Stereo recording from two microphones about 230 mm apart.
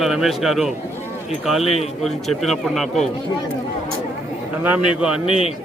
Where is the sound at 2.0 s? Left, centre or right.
Centre.